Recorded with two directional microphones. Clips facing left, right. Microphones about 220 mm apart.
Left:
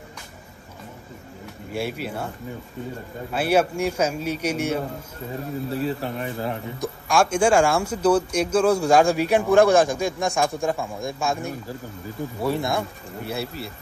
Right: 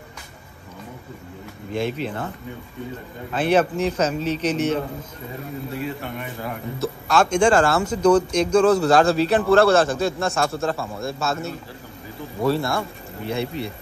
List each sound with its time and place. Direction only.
1.7 s a man's voice: 10° left (ahead or behind)
5.7 s speech: 35° left (ahead or behind)
6.8 s a man's voice: 10° left (ahead or behind)
13.3 s speech: 5° left (ahead or behind)